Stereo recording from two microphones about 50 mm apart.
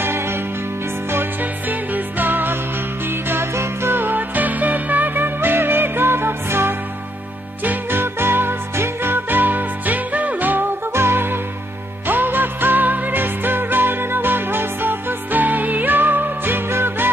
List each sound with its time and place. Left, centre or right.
0.0 s music: right
1.1 s music: right
10.9 s music: right